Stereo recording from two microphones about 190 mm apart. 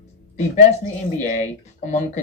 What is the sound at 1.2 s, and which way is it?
Speech, 40° left (ahead or behind).